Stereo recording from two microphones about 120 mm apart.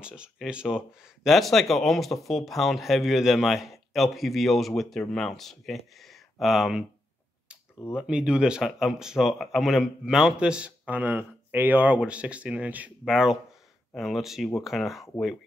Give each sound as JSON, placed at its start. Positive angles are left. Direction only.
{"t": 0.0, "sound": "speech", "side_deg": -5}
{"t": 7.9, "sound": "speech", "side_deg": -10}